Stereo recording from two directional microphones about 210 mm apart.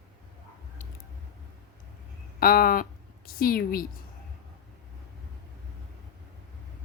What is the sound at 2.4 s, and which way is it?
A woman's voice, 45° left (ahead or behind).